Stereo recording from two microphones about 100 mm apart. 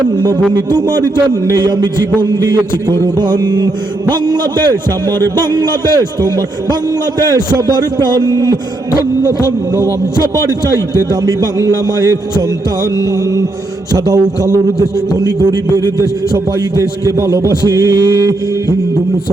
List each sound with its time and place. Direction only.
0.5 s a man's voice: 40° right (ahead or behind)
10.7 s a man's voice: 35° right (ahead or behind)
13.9 s a man's voice: 35° right (ahead or behind)